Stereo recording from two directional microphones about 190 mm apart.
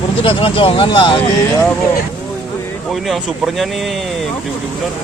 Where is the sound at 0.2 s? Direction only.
30° left (ahead or behind).